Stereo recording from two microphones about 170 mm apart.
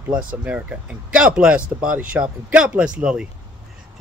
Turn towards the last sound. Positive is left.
turn(degrees=-5)  # may be behind; listen again after turning